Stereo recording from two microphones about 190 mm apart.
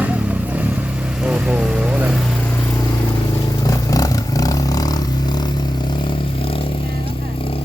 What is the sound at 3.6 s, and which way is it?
Vehicle, 20° left (ahead or behind).